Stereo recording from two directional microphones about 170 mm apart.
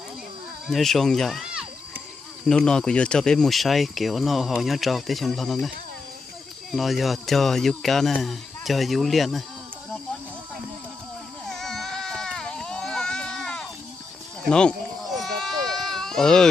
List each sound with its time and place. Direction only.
0.7 s speech: centre (ahead or behind)
11.4 s baby cry: centre (ahead or behind)